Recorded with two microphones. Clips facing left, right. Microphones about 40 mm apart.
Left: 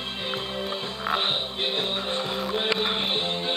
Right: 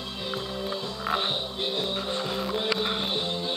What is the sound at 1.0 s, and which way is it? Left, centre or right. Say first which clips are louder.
Music: left 2 dB; left.